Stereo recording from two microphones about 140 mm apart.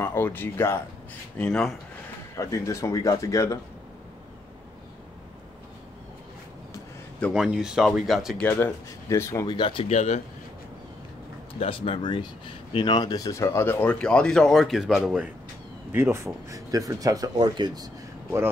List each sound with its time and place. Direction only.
0.0 s speech: 15° left (ahead or behind)
2.3 s speech: 20° left (ahead or behind)
7.3 s speech: 5° right (ahead or behind)
8.4 s speech: 15° left (ahead or behind)
9.5 s speech: 35° left (ahead or behind)
9.8 s speech: 55° left (ahead or behind)
11.6 s speech: 40° left (ahead or behind); by 15.2 s centre (ahead or behind)
15.9 s speech: 15° right (ahead or behind)